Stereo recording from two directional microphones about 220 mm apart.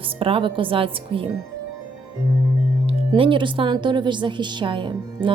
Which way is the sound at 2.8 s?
25° right (ahead or behind).